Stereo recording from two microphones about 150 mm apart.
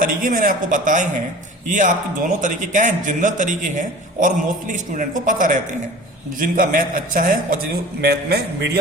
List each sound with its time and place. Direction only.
0.0 s a man's voice: 65° right (ahead or behind)
8.0 s a man's voice: 90° right